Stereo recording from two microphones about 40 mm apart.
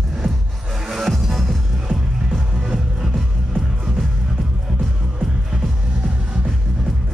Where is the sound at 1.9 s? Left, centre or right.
Right.